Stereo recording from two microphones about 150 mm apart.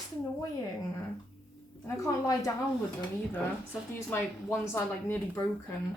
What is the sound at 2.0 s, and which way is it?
Speech, 20° left (ahead or behind).